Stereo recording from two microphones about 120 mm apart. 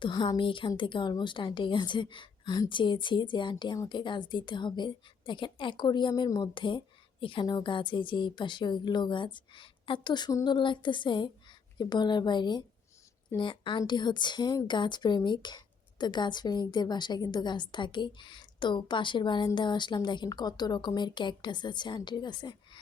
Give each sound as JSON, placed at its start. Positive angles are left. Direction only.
{"t": 0.0, "sound": "a woman's voice", "side_deg": 35}